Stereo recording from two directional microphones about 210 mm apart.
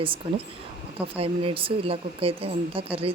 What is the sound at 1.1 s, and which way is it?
Speech, 25° right (ahead or behind).